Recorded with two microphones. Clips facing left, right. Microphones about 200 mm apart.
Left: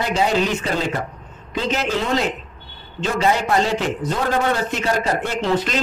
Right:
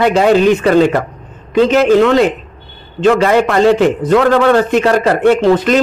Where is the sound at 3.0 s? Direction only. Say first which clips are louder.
Right 10 dB; 75° right (ahead or behind).